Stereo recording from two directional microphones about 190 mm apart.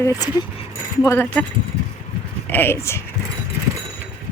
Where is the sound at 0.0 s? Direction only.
20° left (ahead or behind).